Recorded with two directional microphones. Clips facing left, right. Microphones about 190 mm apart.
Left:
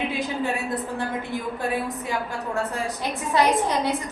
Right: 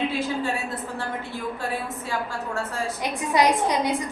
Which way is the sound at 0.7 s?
15° left (ahead or behind).